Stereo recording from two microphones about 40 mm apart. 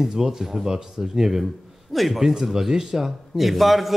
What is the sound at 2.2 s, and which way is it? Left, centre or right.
A man's voice, centre.